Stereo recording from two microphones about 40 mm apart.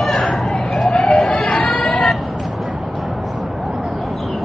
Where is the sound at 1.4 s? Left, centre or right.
Left.